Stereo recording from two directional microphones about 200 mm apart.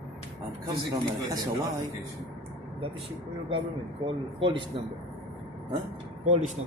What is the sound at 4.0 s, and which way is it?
Speech, 25° right (ahead or behind).